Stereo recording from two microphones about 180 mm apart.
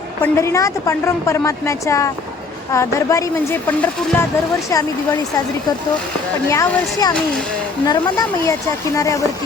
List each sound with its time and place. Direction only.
0.2 s a woman's voice: 15° left (ahead or behind)
6.5 s a woman's voice: 15° left (ahead or behind)